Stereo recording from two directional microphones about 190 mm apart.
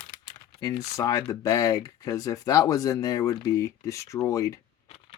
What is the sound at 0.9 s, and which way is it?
Speech, 15° left (ahead or behind).